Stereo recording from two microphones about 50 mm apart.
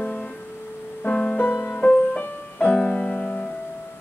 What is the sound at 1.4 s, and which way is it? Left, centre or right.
Music, left.